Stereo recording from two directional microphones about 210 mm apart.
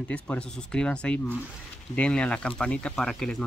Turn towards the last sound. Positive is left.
turn(degrees=5)  # may be behind; listen again after turning